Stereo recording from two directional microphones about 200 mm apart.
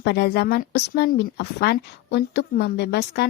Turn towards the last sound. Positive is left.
turn(degrees=55)  # may be behind; listen again after turning